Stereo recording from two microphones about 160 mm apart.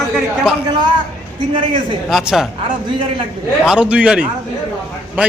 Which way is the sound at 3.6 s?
5° right (ahead or behind).